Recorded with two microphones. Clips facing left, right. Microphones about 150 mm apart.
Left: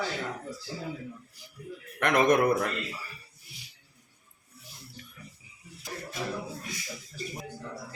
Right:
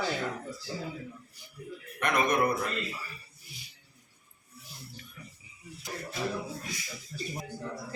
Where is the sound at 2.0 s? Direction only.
90° left.